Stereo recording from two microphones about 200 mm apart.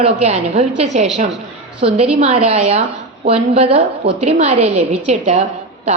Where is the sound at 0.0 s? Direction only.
35° right (ahead or behind).